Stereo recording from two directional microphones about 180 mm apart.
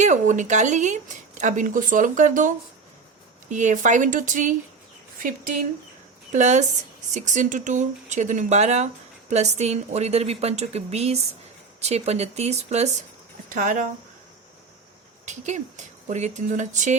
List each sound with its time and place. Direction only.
0.0 s speech: 40° right (ahead or behind)
3.5 s speech: 45° right (ahead or behind)
6.3 s a woman's voice: 40° right (ahead or behind)
13.5 s speech: 45° right (ahead or behind)
15.3 s a woman's voice: 40° right (ahead or behind)